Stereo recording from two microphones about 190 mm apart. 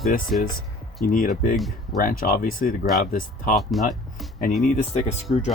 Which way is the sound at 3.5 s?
Centre (ahead or behind).